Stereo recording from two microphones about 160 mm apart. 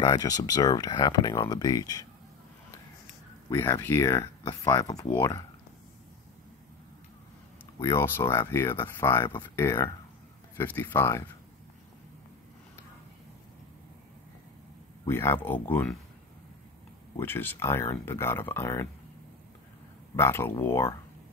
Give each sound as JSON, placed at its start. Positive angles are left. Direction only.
{"t": 0.0, "sound": "speech", "side_deg": 25}
{"t": 3.4, "sound": "speech", "side_deg": 25}
{"t": 3.8, "sound": "speech", "side_deg": 15}
{"t": 4.1, "sound": "speech", "side_deg": 30}
{"t": 7.8, "sound": "speech", "side_deg": 15}
{"t": 15.0, "sound": "speech", "side_deg": 15}
{"t": 17.2, "sound": "speech", "side_deg": 15}
{"t": 20.2, "sound": "speech", "side_deg": 15}